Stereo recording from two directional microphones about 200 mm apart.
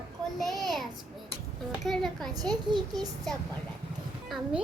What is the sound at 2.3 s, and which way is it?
Speech, 20° right (ahead or behind).